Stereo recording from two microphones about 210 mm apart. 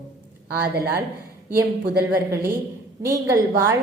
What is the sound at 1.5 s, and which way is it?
Speech, 50° right (ahead or behind).